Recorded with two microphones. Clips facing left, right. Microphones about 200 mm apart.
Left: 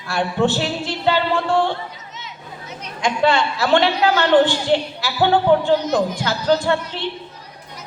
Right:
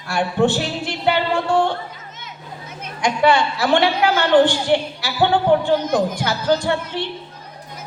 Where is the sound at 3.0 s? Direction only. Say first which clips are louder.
Right 1 dB; 15° right (ahead or behind).